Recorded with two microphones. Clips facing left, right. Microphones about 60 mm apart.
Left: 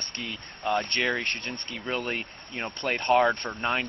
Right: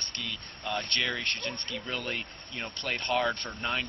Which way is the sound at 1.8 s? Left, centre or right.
Left.